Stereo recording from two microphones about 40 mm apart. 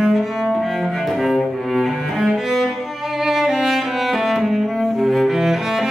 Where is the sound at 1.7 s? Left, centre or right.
Centre.